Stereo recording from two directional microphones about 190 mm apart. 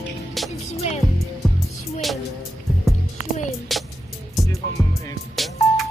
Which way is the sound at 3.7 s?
Centre (ahead or behind).